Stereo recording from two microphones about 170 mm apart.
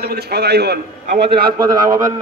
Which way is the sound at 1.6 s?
20° right (ahead or behind).